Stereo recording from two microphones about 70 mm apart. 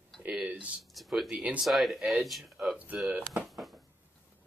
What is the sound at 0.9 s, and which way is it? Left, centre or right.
Speech, centre.